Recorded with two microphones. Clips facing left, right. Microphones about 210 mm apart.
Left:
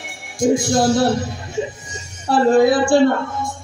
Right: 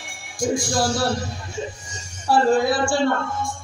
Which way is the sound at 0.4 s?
20° left (ahead or behind).